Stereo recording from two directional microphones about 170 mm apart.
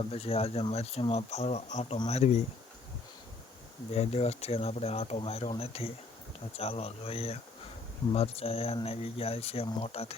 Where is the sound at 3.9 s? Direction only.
40° left (ahead or behind).